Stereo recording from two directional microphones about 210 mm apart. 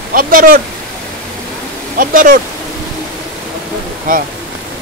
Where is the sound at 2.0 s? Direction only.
40° right (ahead or behind).